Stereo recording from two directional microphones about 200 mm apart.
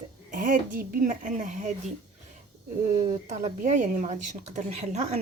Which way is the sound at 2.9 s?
35° right (ahead or behind).